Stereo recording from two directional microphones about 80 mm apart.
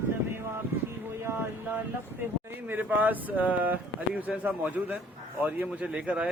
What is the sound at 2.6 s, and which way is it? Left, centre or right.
A man's voice, right.